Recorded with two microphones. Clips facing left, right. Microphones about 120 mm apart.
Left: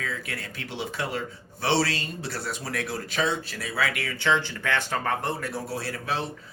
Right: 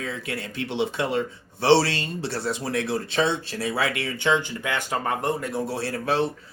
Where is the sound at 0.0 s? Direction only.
25° right (ahead or behind).